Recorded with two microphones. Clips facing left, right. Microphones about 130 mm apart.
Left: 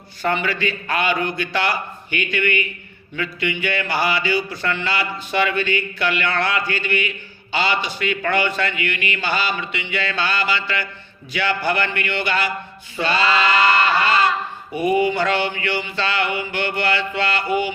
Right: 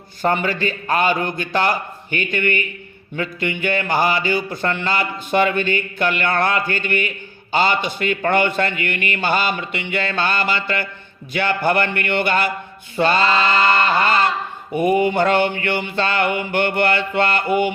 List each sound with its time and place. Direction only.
0.2 s speech: 45° right (ahead or behind)
14.0 s a sound: 50° right (ahead or behind)
14.8 s speech: 50° right (ahead or behind)